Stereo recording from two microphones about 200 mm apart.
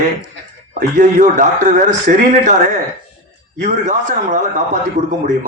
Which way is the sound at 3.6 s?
35° right (ahead or behind).